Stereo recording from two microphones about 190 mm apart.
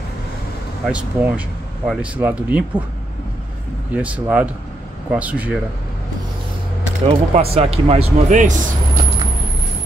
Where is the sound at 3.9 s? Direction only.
10° right (ahead or behind).